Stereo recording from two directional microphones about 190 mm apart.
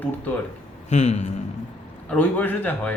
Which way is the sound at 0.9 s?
40° left (ahead or behind).